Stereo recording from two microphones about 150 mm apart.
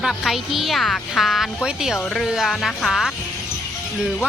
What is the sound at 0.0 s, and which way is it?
Speech, centre (ahead or behind).